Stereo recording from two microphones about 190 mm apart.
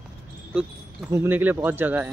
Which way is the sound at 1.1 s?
10° right (ahead or behind).